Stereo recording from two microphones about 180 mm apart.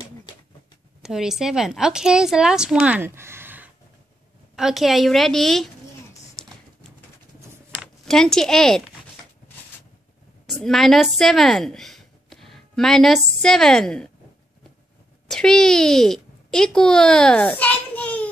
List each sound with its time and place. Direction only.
1.0 s a woman's voice: centre (ahead or behind)
7.8 s speech: centre (ahead or behind)
10.4 s a woman's voice: centre (ahead or behind)
15.2 s speech: 5° left (ahead or behind)